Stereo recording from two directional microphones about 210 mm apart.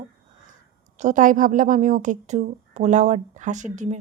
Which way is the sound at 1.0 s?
35° right (ahead or behind).